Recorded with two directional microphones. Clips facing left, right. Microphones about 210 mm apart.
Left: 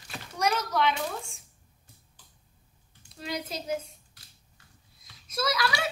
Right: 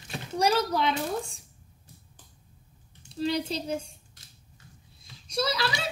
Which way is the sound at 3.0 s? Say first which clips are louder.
Right 7 dB; 30° right (ahead or behind).